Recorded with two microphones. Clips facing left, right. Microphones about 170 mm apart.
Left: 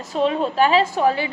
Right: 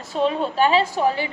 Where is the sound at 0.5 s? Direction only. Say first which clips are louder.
Left 1 dB; 40° left (ahead or behind).